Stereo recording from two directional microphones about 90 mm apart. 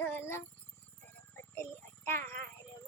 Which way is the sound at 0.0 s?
25° left (ahead or behind).